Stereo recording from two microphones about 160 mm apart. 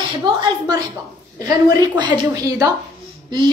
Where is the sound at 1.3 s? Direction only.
25° right (ahead or behind).